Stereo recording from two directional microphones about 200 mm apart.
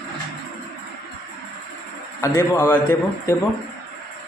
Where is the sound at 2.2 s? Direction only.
15° left (ahead or behind).